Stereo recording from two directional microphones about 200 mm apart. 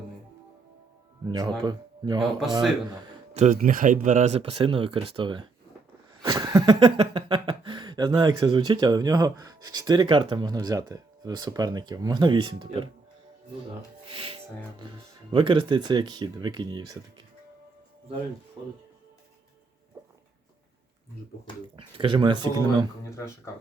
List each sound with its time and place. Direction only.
1.3 s speech: 20° right (ahead or behind)
3.3 s speech: 40° right (ahead or behind); by 5.5 s 25° right (ahead or behind)
6.2 s a sound: 20° right (ahead or behind)
6.7 s speech: 25° right (ahead or behind)
14.1 s speech: 25° right (ahead or behind)
18.6 s speech: 25° right (ahead or behind)
21.8 s speech: 25° right (ahead or behind)
23.0 s speech: 15° left (ahead or behind)